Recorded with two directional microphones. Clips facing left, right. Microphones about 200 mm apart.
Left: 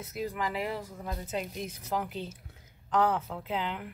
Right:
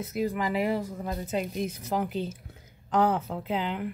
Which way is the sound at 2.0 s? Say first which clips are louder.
Right 7 dB; 40° right (ahead or behind).